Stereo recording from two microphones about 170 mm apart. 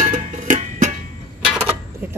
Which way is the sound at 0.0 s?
45° right (ahead or behind).